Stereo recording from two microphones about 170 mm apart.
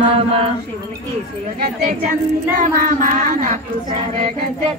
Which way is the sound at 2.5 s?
55° right (ahead or behind).